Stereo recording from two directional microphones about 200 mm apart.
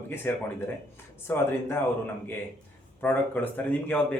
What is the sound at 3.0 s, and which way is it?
Speech, 10° left (ahead or behind).